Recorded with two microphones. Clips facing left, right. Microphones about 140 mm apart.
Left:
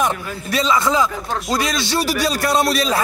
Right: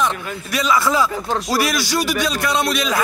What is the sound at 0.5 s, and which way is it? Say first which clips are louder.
A man's voice: left 1 dB; 25° left (ahead or behind).